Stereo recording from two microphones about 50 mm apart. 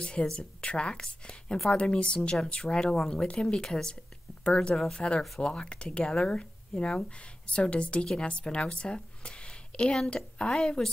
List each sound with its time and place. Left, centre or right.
0.0 s a woman's voice: centre